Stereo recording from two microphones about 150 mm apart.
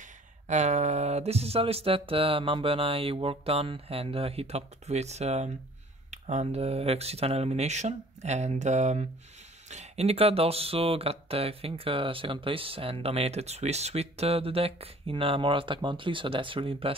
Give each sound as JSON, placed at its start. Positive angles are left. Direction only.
{"t": 0.5, "sound": "speech", "side_deg": -50}